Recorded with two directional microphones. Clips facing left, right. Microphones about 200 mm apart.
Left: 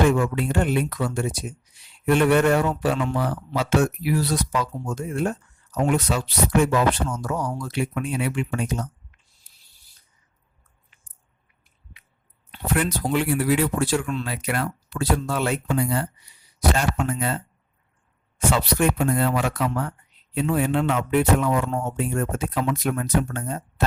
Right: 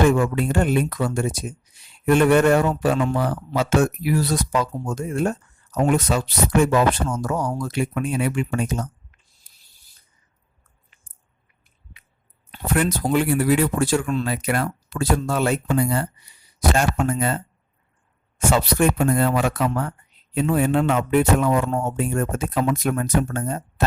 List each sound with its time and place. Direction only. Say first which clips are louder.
0.1 s a man's voice: right 2 dB; 45° right (ahead or behind)
9.5 s a sound: right 1 dB; 50° right (ahead or behind)
12.5 s a man's voice: right 2 dB; 45° right (ahead or behind)